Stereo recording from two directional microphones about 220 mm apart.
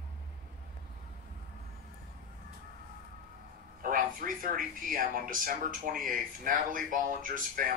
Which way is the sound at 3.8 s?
40° right (ahead or behind).